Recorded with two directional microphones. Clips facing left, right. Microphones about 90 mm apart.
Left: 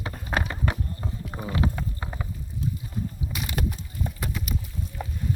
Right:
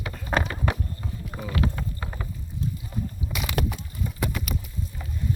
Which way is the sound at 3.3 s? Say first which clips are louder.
Right 3 dB; 90° right.